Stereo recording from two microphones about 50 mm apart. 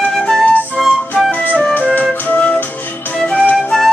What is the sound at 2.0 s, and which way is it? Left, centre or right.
Music, left.